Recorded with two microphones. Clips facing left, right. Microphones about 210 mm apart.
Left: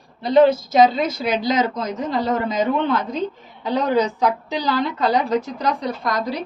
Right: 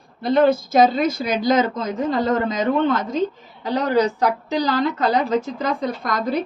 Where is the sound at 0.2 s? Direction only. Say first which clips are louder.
Left 2 dB; 50° right (ahead or behind).